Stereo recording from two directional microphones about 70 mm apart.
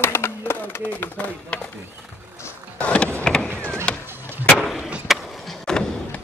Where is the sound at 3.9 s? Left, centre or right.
Centre.